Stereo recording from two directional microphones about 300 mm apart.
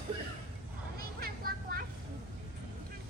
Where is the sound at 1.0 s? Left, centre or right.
Right.